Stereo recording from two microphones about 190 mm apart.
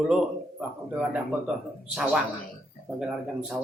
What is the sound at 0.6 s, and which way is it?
Speech, 5° right (ahead or behind).